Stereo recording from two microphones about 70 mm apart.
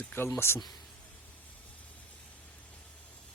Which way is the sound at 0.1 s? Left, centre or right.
Left.